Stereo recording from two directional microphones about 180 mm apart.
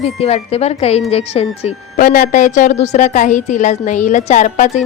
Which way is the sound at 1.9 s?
50° left (ahead or behind).